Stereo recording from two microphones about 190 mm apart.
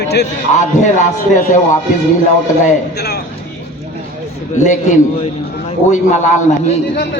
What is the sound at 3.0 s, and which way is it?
Speech, 60° left (ahead or behind).